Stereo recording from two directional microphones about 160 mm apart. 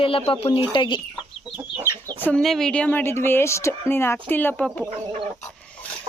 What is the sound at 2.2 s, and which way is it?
Speech, 5° left (ahead or behind).